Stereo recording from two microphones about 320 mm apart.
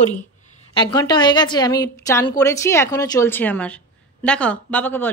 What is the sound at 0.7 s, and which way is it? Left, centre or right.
A woman's voice, centre.